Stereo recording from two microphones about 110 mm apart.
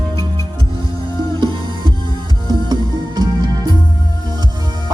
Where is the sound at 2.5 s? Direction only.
40° right (ahead or behind).